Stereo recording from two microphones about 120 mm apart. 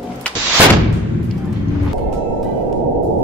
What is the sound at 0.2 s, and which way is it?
Artillery fire, 10° left (ahead or behind).